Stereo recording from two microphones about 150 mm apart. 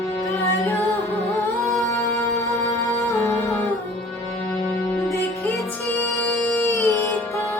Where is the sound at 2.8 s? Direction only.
20° left (ahead or behind).